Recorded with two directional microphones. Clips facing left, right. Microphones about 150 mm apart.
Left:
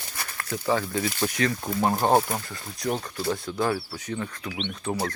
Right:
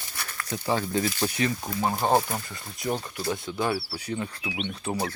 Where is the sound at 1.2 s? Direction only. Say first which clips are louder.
Left 1 dB; 15° right (ahead or behind).